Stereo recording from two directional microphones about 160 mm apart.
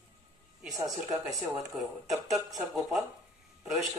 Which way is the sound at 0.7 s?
20° right (ahead or behind).